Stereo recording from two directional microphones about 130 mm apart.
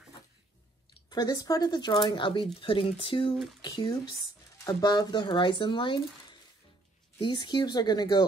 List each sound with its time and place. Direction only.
1.1 s speech: 30° left (ahead or behind)
7.2 s speech: 35° left (ahead or behind)